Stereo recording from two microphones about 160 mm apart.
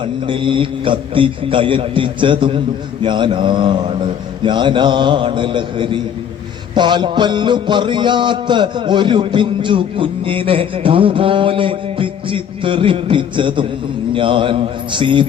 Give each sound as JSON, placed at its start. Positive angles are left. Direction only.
{"t": 0.0, "sound": "music", "side_deg": -30}